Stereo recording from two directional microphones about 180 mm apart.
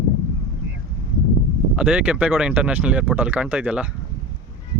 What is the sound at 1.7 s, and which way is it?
Speech, 5° right (ahead or behind).